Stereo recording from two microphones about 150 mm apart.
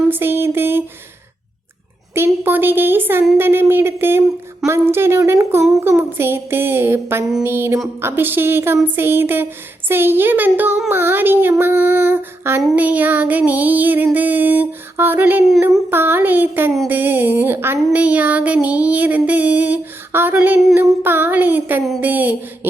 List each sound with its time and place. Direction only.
0.1 s speech: 15° right (ahead or behind)
2.1 s speech: 15° right (ahead or behind)